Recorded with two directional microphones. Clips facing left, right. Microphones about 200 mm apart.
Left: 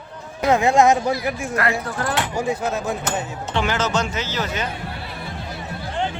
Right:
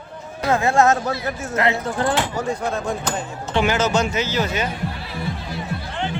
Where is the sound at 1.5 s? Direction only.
20° right (ahead or behind).